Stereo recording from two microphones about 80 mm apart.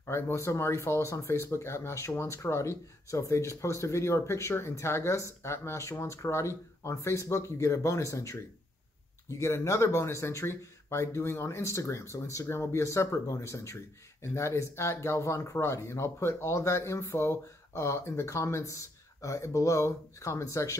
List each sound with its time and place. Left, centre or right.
0.0 s speech: left